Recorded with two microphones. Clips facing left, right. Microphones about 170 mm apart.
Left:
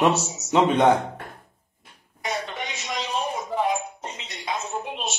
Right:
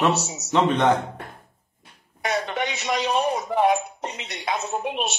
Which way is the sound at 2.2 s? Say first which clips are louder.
Right 5 dB; 65° right (ahead or behind).